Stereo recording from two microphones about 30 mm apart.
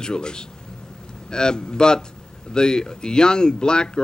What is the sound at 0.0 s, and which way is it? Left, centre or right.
Speech, left.